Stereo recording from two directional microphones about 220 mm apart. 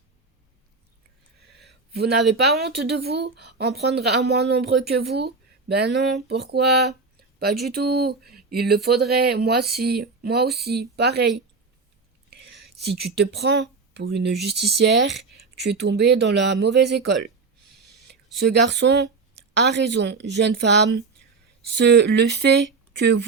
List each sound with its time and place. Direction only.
1.5 s a sound: 50° right (ahead or behind)
2.3 s speech: 50° right (ahead or behind)
12.3 s speech: 50° right (ahead or behind)
18.3 s speech: 50° right (ahead or behind)